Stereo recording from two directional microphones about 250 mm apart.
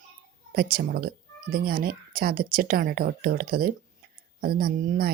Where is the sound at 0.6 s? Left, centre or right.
Right.